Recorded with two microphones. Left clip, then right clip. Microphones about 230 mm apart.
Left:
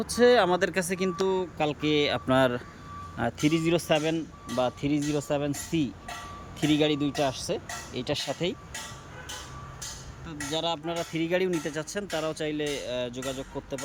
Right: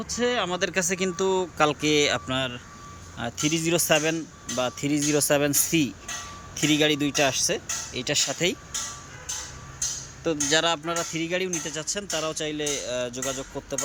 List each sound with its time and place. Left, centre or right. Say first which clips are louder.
0.0 s speech: left 5 dB; left; by 2.2 s centre
2.2 s speech: left 5 dB; left
10.6 s speech: right 5 dB; centre